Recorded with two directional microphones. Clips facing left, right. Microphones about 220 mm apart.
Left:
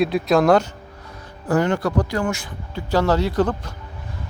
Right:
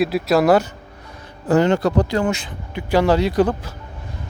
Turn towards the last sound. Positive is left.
turn(degrees=-10)  # may be behind; listen again after turning